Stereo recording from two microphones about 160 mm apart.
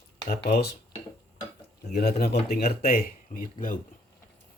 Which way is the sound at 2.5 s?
70° left (ahead or behind).